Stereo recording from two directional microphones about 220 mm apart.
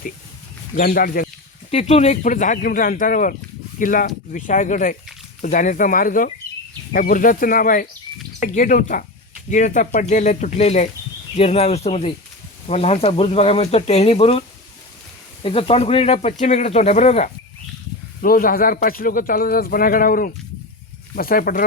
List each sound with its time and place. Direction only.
0.8 s a man's voice: 40° left (ahead or behind)
1.7 s a man's voice: 30° left (ahead or behind)
15.4 s speech: 25° left (ahead or behind)
18.2 s a man's voice: 40° left (ahead or behind)